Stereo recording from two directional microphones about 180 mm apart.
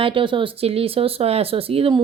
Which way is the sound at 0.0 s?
30° right (ahead or behind).